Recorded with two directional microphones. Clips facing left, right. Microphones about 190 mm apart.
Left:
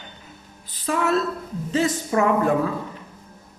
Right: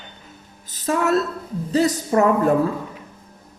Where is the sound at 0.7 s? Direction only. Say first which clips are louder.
Right 2 dB; 45° right (ahead or behind).